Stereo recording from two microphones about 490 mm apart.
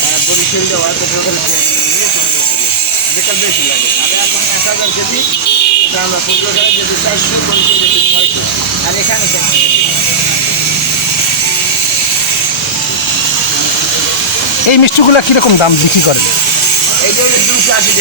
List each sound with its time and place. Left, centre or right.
14.7 s speech: left